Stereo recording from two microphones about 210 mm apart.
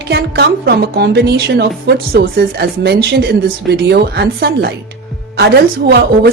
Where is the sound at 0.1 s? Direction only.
50° right (ahead or behind).